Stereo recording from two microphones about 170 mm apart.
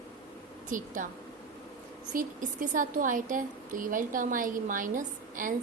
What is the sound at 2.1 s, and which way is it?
A woman's voice, 50° right (ahead or behind).